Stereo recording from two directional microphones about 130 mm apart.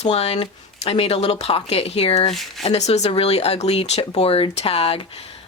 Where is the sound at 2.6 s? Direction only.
60° left (ahead or behind).